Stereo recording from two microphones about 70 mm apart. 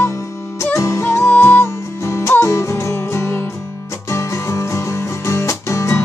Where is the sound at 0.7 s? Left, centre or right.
Left.